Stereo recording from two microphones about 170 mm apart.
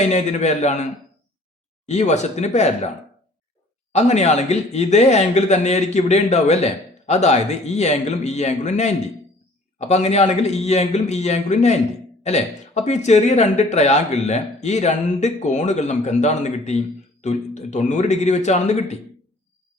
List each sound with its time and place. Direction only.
0.0 s speech: 40° left (ahead or behind)
1.9 s speech: 40° left (ahead or behind)
3.9 s speech: 40° left (ahead or behind)